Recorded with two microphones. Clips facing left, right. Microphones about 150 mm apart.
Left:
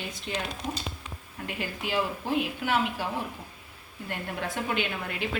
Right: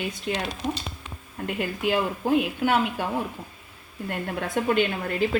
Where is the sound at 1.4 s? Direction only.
50° right (ahead or behind).